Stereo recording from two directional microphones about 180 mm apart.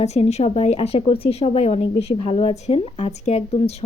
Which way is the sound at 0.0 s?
35° left (ahead or behind).